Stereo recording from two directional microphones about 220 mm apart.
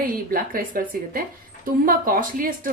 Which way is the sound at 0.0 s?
40° right (ahead or behind).